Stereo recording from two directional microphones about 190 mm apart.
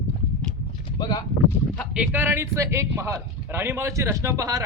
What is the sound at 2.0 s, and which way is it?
Speech, 10° right (ahead or behind).